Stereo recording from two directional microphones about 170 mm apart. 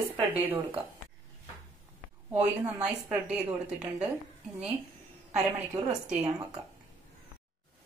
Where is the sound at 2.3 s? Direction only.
10° right (ahead or behind).